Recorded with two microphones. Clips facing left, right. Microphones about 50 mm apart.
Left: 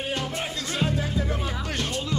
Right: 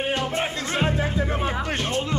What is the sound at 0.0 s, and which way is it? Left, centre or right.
Speech, right.